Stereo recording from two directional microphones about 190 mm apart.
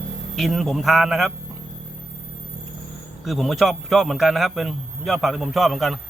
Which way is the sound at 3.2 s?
Centre (ahead or behind).